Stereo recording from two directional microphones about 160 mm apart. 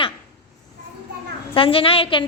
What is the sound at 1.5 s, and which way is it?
Speech, 35° left (ahead or behind).